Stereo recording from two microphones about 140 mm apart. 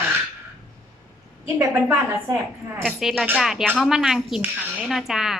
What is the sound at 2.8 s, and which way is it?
Speech, centre (ahead or behind).